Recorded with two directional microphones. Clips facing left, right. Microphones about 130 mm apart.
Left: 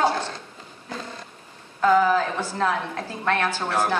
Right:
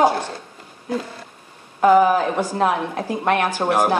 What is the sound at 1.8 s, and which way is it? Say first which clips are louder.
A woman's voice: right 5 dB; 20° right (ahead or behind).